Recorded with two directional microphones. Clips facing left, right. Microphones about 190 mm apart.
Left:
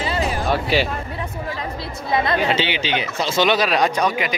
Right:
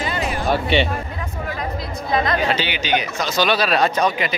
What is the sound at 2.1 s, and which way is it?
Speech, 25° left (ahead or behind).